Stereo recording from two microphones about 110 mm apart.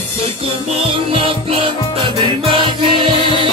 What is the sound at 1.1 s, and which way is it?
Music, 55° right (ahead or behind).